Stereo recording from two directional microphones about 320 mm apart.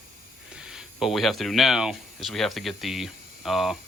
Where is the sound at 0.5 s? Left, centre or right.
Centre.